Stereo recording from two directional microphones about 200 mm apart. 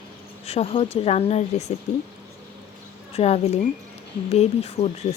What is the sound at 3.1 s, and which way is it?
Speech, 30° left (ahead or behind).